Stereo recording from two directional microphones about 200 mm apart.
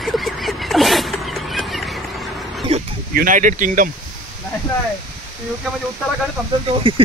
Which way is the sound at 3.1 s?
45° right (ahead or behind).